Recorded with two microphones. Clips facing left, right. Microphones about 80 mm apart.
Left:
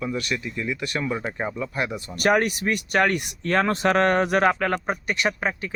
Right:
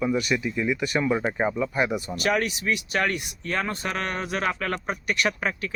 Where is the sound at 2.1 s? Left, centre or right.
Left.